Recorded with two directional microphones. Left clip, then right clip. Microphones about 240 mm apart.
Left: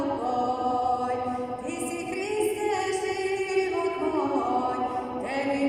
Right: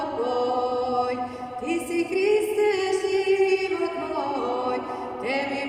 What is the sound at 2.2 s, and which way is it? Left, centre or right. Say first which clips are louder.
Music: right 6 dB; right.